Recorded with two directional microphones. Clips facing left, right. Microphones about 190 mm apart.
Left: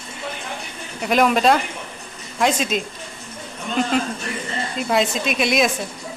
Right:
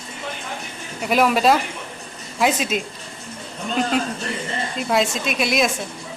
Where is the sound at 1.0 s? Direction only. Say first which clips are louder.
Left 1 dB; 5° right (ahead or behind).